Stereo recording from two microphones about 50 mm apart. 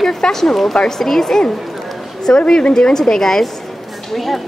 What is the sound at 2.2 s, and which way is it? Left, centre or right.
A woman's voice, centre.